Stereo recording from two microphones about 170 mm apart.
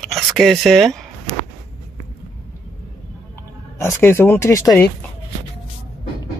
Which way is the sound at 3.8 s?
15° left (ahead or behind).